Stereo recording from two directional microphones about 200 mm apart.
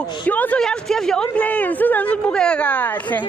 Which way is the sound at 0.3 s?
10° left (ahead or behind).